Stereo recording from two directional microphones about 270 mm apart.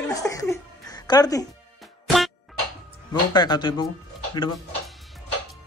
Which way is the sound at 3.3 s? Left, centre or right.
Centre.